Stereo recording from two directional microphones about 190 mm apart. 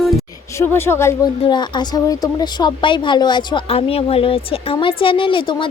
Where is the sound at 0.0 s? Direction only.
Centre (ahead or behind).